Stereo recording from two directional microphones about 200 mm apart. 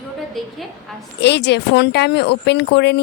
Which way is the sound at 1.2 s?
60° left (ahead or behind).